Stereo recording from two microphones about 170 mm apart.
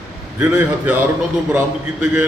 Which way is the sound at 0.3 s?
10° right (ahead or behind).